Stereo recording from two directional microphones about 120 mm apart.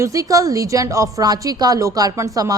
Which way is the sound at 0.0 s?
25° right (ahead or behind).